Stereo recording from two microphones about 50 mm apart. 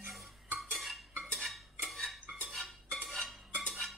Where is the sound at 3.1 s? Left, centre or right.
Centre.